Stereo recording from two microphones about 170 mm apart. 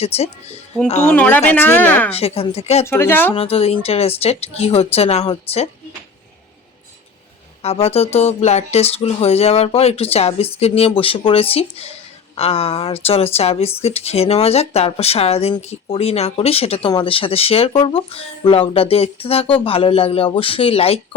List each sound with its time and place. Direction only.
0.0 s speech: 35° left (ahead or behind)
1.0 s speech: 10° left (ahead or behind)
2.1 s speech: 35° left (ahead or behind)
2.8 s speech: 15° left (ahead or behind)
3.3 s speech: 35° left (ahead or behind)
7.6 s speech: 35° left (ahead or behind)